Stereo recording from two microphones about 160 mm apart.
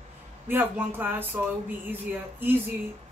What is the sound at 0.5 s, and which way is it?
Speech, 10° right (ahead or behind).